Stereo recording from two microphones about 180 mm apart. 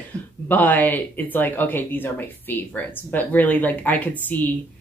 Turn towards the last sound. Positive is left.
turn(degrees=10)  # may be behind; listen again after turning